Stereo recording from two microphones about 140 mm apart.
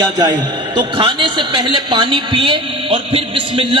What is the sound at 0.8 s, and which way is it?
A man's voice, 35° right (ahead or behind).